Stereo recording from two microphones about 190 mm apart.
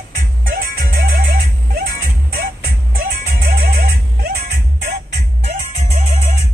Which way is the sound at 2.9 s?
45° right (ahead or behind).